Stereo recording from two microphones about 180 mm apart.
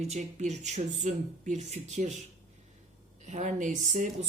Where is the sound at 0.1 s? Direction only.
40° right (ahead or behind).